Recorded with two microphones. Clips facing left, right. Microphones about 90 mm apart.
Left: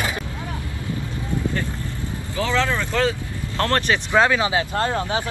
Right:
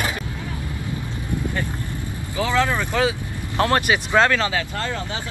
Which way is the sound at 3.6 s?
10° right (ahead or behind).